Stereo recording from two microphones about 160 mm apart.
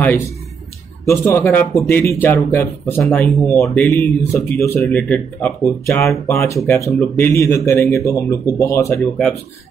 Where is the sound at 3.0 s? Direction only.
5° left (ahead or behind).